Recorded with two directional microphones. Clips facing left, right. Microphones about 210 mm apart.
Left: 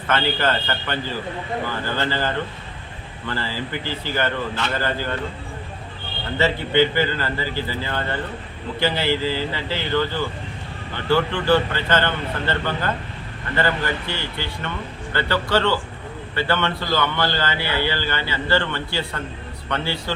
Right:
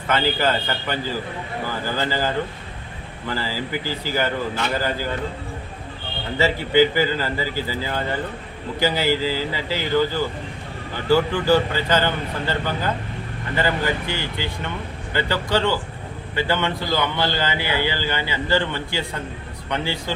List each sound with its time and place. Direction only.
0.1 s a man's voice: 15° right (ahead or behind)
2.0 s a man's voice: 10° right (ahead or behind)
6.4 s a man's voice: 10° right (ahead or behind)